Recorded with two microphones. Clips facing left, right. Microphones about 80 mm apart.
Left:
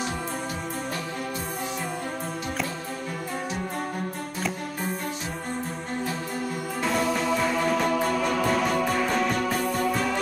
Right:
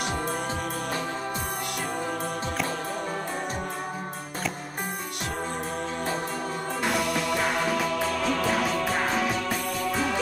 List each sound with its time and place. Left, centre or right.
7.2 s music: right
7.6 s music: centre